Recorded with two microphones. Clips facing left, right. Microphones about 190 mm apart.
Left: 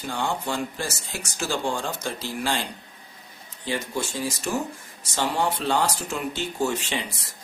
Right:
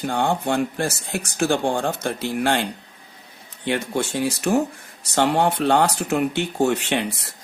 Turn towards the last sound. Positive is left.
turn(degrees=-65)  # may be behind; listen again after turning